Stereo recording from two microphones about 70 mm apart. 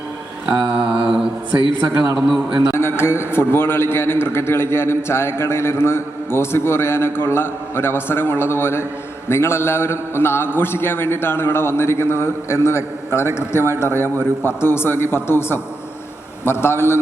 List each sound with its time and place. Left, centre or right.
0.4 s mantra: centre
2.1 s a man's voice: centre
2.7 s a man's voice: left